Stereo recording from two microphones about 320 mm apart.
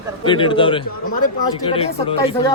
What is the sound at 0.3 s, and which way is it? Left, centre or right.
A man's voice, centre.